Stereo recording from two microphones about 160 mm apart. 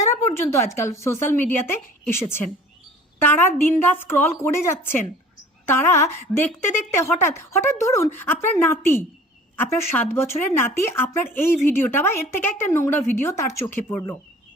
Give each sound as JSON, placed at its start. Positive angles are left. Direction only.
{"t": 0.2, "sound": "speech", "side_deg": 15}